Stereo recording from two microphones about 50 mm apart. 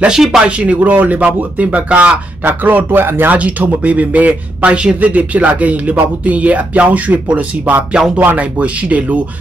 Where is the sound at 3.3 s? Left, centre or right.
Right.